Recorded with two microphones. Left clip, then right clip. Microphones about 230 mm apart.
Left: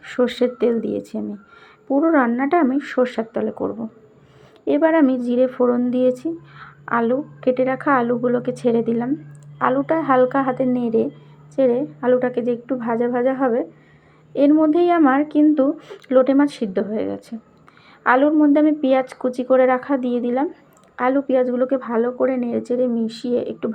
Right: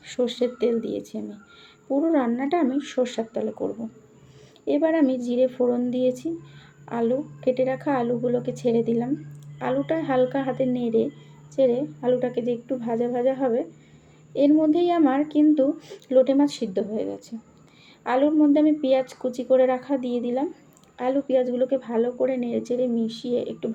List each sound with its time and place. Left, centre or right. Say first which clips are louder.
0.4 s speech: left 5 dB; centre
1.1 s speech: left 6 dB; left
1.9 s speech: left 6 dB; centre
4.6 s speech: left 5 dB; centre